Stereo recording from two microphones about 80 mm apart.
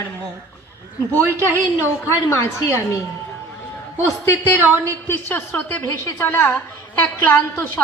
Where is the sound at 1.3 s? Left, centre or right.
Right.